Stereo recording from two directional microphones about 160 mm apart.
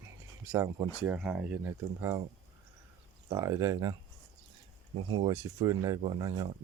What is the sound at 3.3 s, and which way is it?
Speech, 20° right (ahead or behind).